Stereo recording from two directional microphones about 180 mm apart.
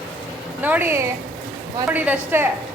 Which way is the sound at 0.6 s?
10° right (ahead or behind).